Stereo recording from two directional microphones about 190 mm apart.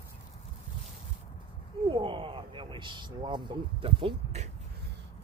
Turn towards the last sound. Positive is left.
turn(degrees=-30)  # may be behind; listen again after turning